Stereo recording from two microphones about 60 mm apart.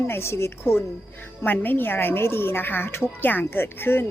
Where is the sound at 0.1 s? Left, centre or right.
Left.